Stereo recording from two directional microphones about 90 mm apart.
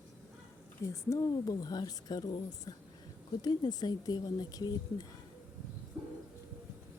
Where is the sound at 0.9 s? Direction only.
40° left (ahead or behind).